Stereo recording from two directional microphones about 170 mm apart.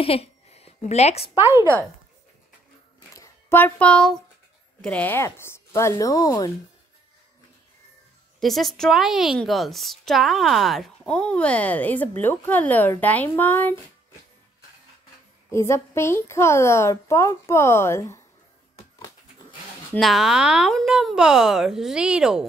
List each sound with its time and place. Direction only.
0.0 s a woman's voice: 35° left (ahead or behind)
1.4 s a woman's voice: 15° right (ahead or behind)
3.1 s a sound: 15° left (ahead or behind)
4.8 s a woman's voice: 10° left (ahead or behind)
8.4 s a woman's voice: centre (ahead or behind)
15.5 s a woman's voice: 15° left (ahead or behind)
20.0 s a woman's voice: centre (ahead or behind)